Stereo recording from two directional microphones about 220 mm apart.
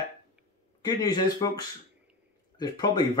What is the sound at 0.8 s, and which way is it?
Speech, 20° left (ahead or behind).